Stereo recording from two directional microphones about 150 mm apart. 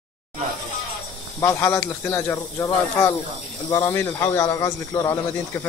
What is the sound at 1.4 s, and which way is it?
Speech, 15° left (ahead or behind).